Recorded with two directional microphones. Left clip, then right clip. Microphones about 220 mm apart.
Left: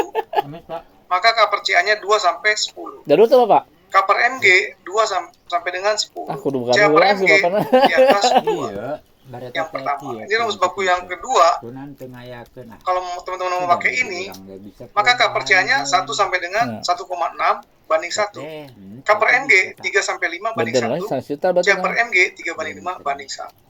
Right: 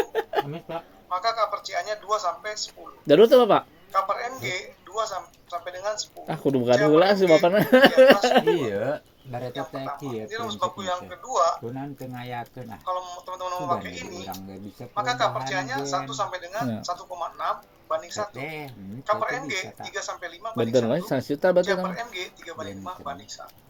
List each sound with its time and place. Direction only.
0.1 s a sound: centre (ahead or behind)
1.1 s a man's voice: 45° left (ahead or behind)
3.1 s speech: 10° right (ahead or behind)
3.9 s a man's voice: 40° left (ahead or behind)
6.2 s speech: 5° right (ahead or behind)
6.7 s a man's voice: 45° left (ahead or behind)
6.9 s speech: 15° right (ahead or behind)
8.3 s speech: centre (ahead or behind)
8.5 s speech: 40° right (ahead or behind)
9.5 s a man's voice: 45° left (ahead or behind)
12.8 s a man's voice: 45° left (ahead or behind)
21.0 s speech: 10° right (ahead or behind)
21.8 s a man's voice: 45° left (ahead or behind)